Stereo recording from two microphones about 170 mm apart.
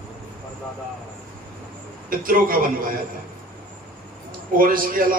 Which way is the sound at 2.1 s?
55° right (ahead or behind).